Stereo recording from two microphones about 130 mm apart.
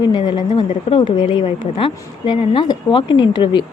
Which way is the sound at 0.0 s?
35° left (ahead or behind).